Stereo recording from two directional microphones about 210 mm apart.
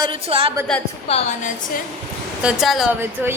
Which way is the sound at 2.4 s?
Centre (ahead or behind).